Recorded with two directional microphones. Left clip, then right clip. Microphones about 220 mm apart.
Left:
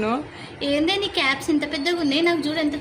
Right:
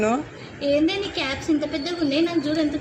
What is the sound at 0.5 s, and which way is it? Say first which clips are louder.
A woman's voice: right 1 dB; 55° left (ahead or behind).